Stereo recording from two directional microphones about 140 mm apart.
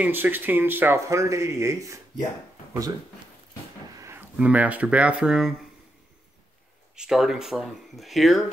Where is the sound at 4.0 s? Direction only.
15° right (ahead or behind).